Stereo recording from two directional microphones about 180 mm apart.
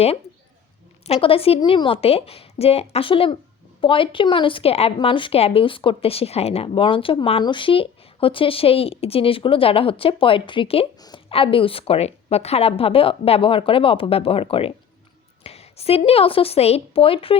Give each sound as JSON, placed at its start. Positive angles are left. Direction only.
{"t": 1.0, "sound": "a woman's voice", "side_deg": 35}